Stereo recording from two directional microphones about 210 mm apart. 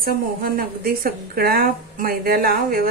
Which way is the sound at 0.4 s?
45° right (ahead or behind).